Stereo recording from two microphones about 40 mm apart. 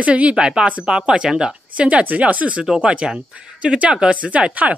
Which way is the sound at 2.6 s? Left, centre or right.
Centre.